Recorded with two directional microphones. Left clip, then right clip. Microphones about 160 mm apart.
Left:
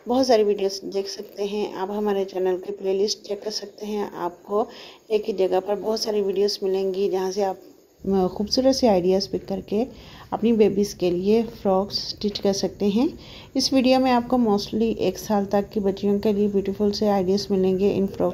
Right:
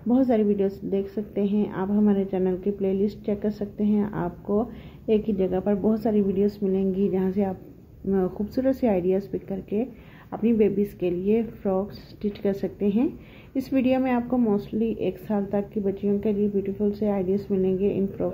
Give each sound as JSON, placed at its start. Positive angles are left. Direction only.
{"t": 0.1, "sound": "a woman's voice", "side_deg": 30}
{"t": 5.1, "sound": "a woman's voice", "side_deg": 30}